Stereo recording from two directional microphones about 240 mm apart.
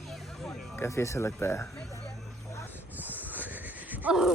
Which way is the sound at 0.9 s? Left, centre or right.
Centre.